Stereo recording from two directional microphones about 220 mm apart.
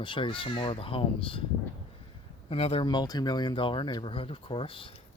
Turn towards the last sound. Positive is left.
turn(degrees=25)  # may be behind; listen again after turning